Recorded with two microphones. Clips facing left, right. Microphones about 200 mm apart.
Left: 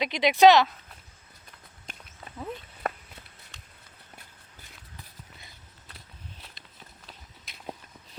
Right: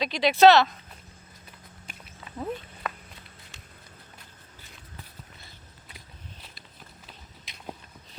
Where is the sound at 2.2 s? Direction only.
40° left (ahead or behind).